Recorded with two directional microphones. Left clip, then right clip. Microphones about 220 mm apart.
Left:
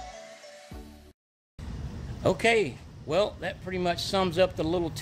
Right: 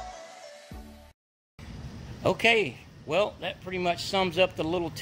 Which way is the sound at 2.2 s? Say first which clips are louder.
Right 1 dB; 15° right (ahead or behind).